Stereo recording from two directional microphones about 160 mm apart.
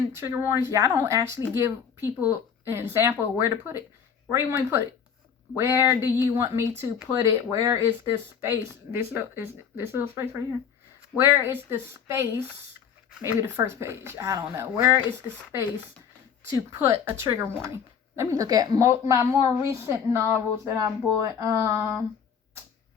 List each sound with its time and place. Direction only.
0.1 s a woman's voice: 15° right (ahead or behind)
16.6 s a woman's voice: 15° right (ahead or behind)